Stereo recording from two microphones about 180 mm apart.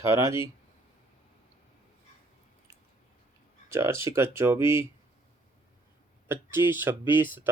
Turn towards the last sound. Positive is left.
turn(degrees=-10)  # may be behind; listen again after turning